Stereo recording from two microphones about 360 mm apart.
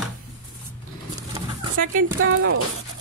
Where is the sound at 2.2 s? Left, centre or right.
Right.